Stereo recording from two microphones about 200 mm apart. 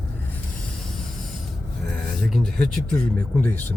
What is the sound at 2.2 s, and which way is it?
Speech, centre (ahead or behind).